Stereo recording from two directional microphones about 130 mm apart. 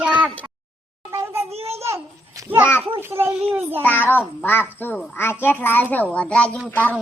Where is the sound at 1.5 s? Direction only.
50° right (ahead or behind).